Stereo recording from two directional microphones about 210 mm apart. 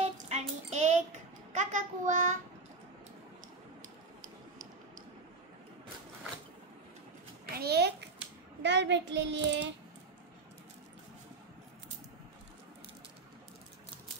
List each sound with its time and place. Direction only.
0.0 s child singing: 30° right (ahead or behind)
7.5 s a sound: 50° right (ahead or behind)
8.6 s child singing: 55° right (ahead or behind)